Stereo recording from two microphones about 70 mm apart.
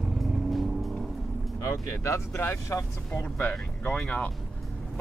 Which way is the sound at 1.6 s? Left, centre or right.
Left.